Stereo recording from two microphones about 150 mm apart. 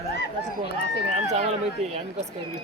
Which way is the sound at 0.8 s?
50° right (ahead or behind).